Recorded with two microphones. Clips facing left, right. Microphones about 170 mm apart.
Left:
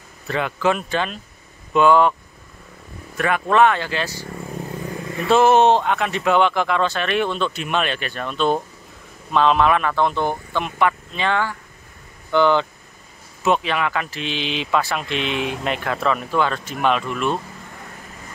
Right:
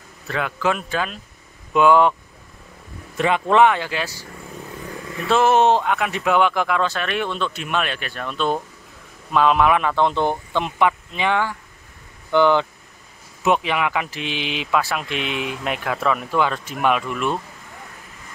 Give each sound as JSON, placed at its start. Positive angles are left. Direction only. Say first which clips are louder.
{"t": 0.3, "sound": "speech", "louder": "left 2 dB", "side_deg": 0}
{"t": 3.2, "sound": "speech", "louder": "right 1 dB", "side_deg": -20}
{"t": 5.3, "sound": "speech", "louder": "left 2 dB", "side_deg": 0}